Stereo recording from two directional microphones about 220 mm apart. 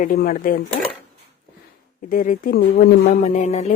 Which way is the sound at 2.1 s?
40° left (ahead or behind).